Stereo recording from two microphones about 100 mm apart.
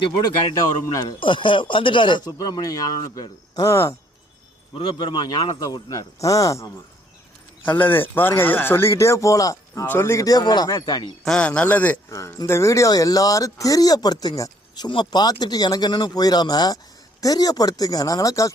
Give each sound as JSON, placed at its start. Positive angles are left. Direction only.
{"t": 1.2, "sound": "speech", "side_deg": 55}
{"t": 4.7, "sound": "speech", "side_deg": 60}
{"t": 7.6, "sound": "speech", "side_deg": 20}
{"t": 9.8, "sound": "speech", "side_deg": 20}
{"t": 10.2, "sound": "speech", "side_deg": 40}
{"t": 11.3, "sound": "speech", "side_deg": 10}
{"t": 12.1, "sound": "speech", "side_deg": 30}